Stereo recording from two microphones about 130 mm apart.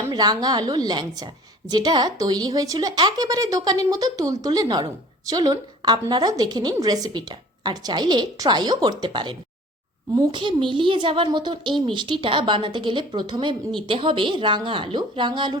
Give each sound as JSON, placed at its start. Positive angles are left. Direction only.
{"t": 0.1, "sound": "a woman's voice", "side_deg": -30}